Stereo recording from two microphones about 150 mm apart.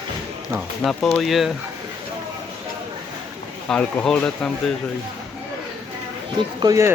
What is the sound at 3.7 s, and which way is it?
Speech, 5° left (ahead or behind).